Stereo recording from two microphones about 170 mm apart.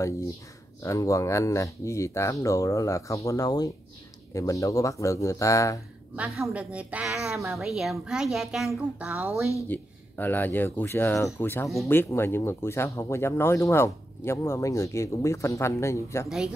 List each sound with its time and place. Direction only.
0.8 s speech: 20° left (ahead or behind)
6.1 s a woman's voice: 5° right (ahead or behind)
9.5 s speech: 10° left (ahead or behind)